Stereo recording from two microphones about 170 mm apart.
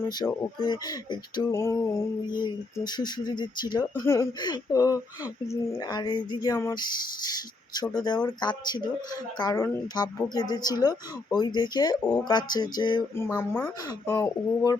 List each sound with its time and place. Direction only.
0.2 s a woman's voice: 25° left (ahead or behind)
13.1 s a woman's voice: 15° left (ahead or behind)